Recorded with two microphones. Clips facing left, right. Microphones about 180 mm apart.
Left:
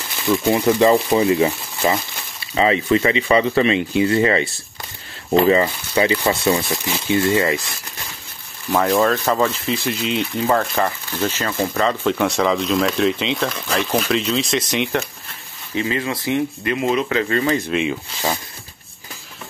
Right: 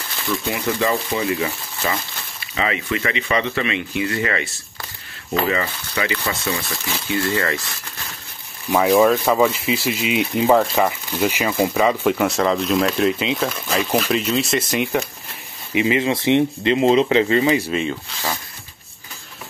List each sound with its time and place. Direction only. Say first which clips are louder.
0.3 s speech: left 7 dB; 40° left (ahead or behind)
6.7 s speech: left 5 dB; 20° left (ahead or behind)
8.6 s speech: right 2 dB; 5° right (ahead or behind)
15.7 s speech: right 4 dB; 15° right (ahead or behind)